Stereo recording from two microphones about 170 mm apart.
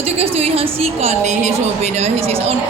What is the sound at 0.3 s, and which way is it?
A woman's voice, 35° right (ahead or behind).